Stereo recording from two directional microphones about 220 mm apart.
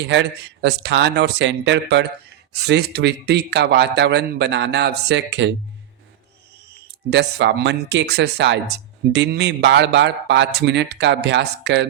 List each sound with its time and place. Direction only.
0.1 s speech: 55° right (ahead or behind)
6.8 s speech: 50° right (ahead or behind)